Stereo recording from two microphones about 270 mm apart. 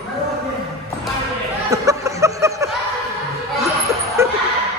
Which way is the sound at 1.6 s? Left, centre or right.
Centre.